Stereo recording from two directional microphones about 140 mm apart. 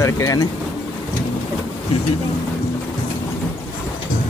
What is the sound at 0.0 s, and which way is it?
Speech, 25° left (ahead or behind).